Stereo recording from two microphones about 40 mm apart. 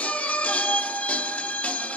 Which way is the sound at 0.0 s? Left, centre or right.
Left.